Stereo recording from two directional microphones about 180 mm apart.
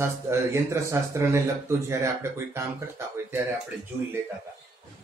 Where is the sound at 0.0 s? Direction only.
15° right (ahead or behind).